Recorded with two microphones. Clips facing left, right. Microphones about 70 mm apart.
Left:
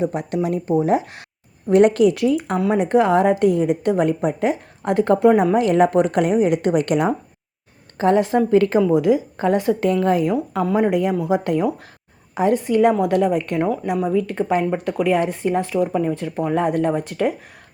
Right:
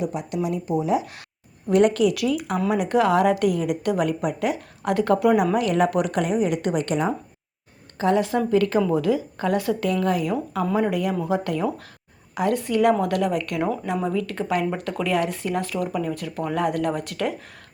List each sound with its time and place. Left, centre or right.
0.0 s speech: left
2.1 s speech: left
7.9 s speech: left
8.8 s speech: centre
11.1 s speech: centre
11.4 s speech: left